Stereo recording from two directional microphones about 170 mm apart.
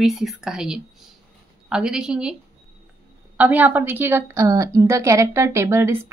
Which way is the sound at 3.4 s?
10° right (ahead or behind).